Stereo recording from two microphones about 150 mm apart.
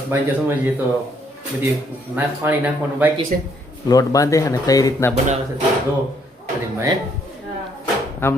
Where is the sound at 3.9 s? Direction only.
25° left (ahead or behind).